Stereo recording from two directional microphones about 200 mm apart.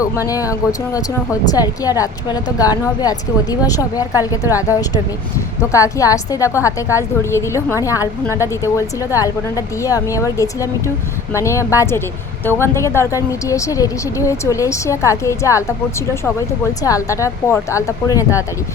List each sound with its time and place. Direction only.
0.0 s a woman's voice: 15° left (ahead or behind)
16.8 s a woman's voice: 15° left (ahead or behind)